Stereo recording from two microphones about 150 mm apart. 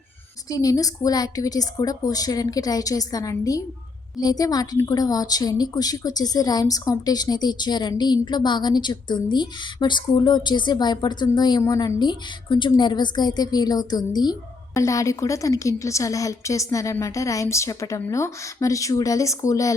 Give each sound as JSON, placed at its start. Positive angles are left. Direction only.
{"t": 0.5, "sound": "a woman's voice", "side_deg": 25}